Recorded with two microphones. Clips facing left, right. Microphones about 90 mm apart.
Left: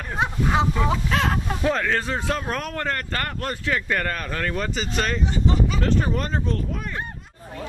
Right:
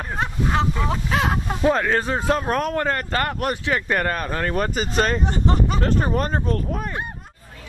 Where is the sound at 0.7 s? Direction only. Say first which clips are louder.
Even; 5° right (ahead or behind).